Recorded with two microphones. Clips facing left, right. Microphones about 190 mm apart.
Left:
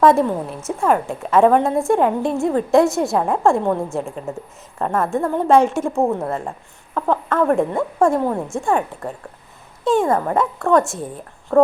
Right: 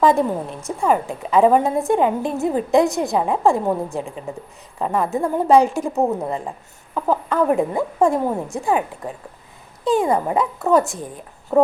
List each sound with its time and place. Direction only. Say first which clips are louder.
0.0 s a woman's voice: left 2 dB; centre (ahead or behind)
6.9 s a woman's voice: even; centre (ahead or behind)
9.8 s a woman's voice: left 1 dB; centre (ahead or behind)
11.5 s speech: left 2 dB; 20° right (ahead or behind)